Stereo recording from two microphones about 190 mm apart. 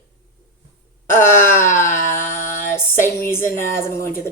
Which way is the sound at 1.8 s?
15° left (ahead or behind).